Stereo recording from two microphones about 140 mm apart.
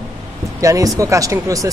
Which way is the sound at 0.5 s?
25° right (ahead or behind).